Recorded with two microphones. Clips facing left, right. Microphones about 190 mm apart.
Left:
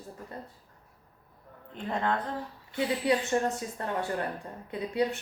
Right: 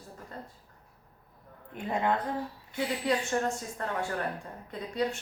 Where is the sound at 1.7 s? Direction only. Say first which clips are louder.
Right 1 dB; 10° right (ahead or behind).